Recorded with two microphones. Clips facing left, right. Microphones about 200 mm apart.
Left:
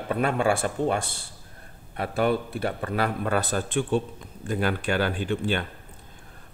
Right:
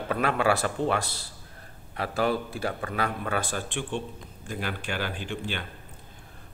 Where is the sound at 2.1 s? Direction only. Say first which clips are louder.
Left 3 dB; 55° left (ahead or behind).